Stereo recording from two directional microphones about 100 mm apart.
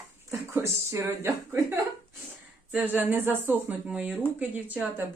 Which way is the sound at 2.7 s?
15° right (ahead or behind).